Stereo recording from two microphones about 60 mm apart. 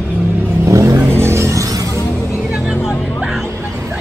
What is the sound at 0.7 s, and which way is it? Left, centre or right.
Vehicle, right.